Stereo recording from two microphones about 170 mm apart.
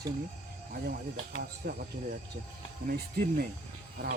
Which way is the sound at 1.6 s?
70° right (ahead or behind).